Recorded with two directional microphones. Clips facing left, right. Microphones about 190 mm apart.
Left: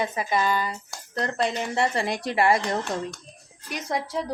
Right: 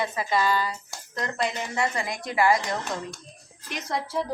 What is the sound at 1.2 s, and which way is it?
A woman's voice, 35° left (ahead or behind).